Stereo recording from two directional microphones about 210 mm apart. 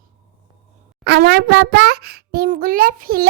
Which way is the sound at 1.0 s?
50° right (ahead or behind).